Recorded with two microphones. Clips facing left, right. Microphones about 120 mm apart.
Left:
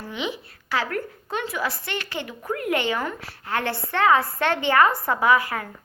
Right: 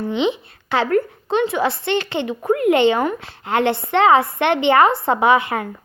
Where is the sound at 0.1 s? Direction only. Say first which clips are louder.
Right 8 dB; 25° right (ahead or behind).